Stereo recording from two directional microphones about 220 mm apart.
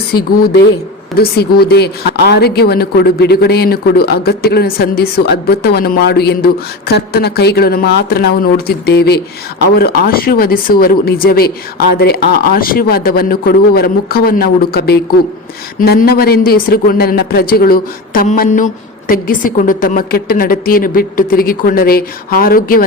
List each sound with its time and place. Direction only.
1.1 s speech: 45° left (ahead or behind)